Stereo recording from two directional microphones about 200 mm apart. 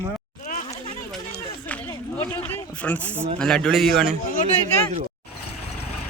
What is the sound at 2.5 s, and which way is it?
A man's voice, 10° left (ahead or behind).